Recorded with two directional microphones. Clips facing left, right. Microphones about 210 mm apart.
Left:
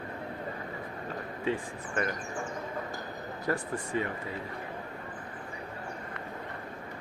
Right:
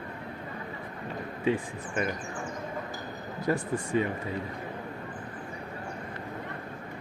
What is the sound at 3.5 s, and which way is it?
Speech, 20° right (ahead or behind).